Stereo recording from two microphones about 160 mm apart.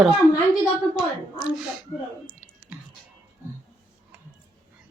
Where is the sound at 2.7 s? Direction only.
5° right (ahead or behind).